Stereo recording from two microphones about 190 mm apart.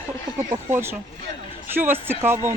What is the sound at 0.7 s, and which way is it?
Speech, 10° right (ahead or behind).